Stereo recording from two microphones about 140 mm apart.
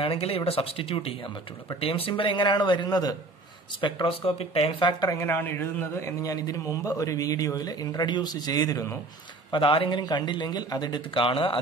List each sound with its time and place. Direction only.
0.0 s speech: 45° left (ahead or behind)
5.0 s a man's voice: 15° left (ahead or behind)
9.5 s speech: 40° left (ahead or behind)